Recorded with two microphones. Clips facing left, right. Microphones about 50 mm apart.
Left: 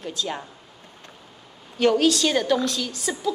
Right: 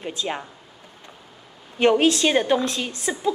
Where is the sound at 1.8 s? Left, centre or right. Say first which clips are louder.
Right 2 dB; right.